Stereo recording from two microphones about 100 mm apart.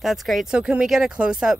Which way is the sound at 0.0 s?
Centre (ahead or behind).